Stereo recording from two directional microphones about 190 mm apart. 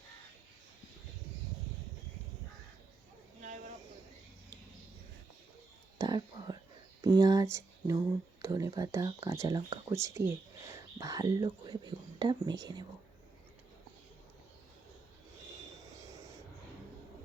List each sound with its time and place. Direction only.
3.4 s a sound: 40° right (ahead or behind)
6.0 s whispering: 20° right (ahead or behind)
7.0 s speech: 20° right (ahead or behind)